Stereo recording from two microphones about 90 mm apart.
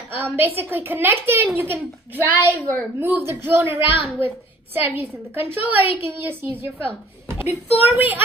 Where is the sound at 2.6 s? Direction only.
15° left (ahead or behind).